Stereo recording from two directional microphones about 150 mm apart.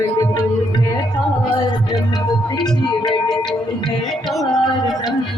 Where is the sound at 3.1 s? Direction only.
5° left (ahead or behind).